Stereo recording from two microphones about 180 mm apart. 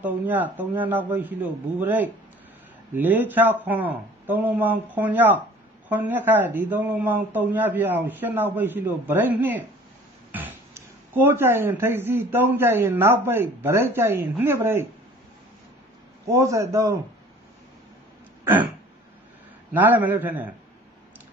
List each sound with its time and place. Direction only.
0.0 s speech: 10° right (ahead or behind)
16.3 s speech: 15° right (ahead or behind)
18.4 s throat clearing: 10° right (ahead or behind)
19.7 s speech: 10° right (ahead or behind)